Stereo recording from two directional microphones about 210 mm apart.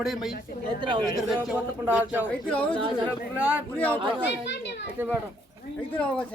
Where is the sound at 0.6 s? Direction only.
20° right (ahead or behind).